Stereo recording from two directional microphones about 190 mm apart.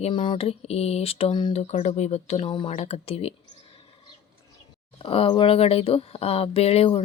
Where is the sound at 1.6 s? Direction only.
35° left (ahead or behind).